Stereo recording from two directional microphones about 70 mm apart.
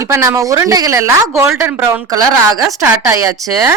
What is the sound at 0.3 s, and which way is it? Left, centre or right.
Speech, right.